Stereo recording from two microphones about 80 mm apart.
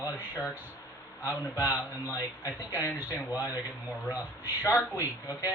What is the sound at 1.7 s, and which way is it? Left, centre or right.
Speech, left.